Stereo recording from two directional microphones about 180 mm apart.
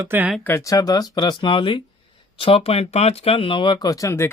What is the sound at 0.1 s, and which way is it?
Speech, 10° right (ahead or behind).